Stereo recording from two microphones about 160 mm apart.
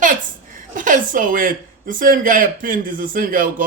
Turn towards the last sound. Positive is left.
turn(degrees=-60)  # may be behind; listen again after turning